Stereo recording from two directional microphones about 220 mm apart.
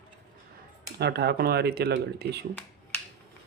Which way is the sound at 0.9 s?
45° right (ahead or behind).